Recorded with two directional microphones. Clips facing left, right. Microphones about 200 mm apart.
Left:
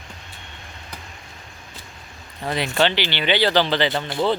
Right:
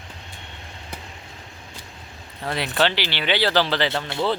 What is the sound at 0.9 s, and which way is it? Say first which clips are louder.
Vehicle: right 3 dB; 25° right (ahead or behind).